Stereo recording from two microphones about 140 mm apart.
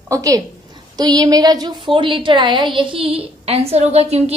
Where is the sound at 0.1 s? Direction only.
25° right (ahead or behind).